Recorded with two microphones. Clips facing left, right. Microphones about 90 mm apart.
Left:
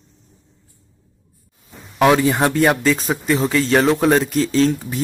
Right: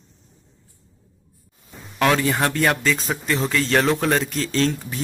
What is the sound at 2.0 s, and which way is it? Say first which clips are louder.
Speech: left 5 dB; 15° left (ahead or behind).